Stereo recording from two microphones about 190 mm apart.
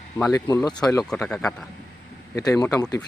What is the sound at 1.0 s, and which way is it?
Speech, 5° left (ahead or behind).